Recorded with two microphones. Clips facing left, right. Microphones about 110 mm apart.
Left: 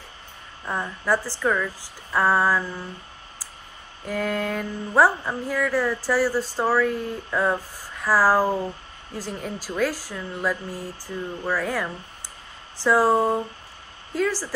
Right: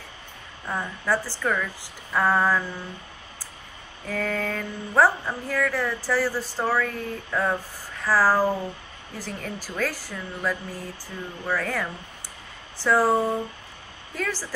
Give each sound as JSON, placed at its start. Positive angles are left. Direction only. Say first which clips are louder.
{"t": 0.7, "sound": "speech", "louder": "left 2 dB", "side_deg": 10}
{"t": 4.0, "sound": "speech", "louder": "left 2 dB", "side_deg": 10}